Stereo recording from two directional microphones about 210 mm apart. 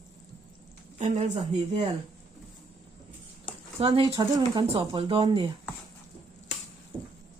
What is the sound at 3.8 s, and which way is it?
Speech, 25° right (ahead or behind).